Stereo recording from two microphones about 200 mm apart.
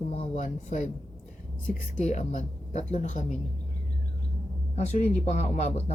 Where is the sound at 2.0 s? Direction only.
35° left (ahead or behind).